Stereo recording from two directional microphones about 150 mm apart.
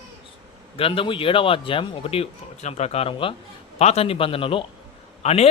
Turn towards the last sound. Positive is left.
turn(degrees=45)  # may be behind; listen again after turning